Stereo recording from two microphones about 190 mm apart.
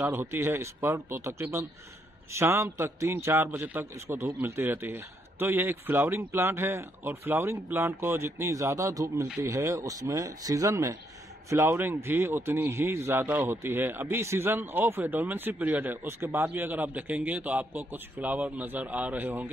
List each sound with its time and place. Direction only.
0.0 s speech: 10° right (ahead or behind)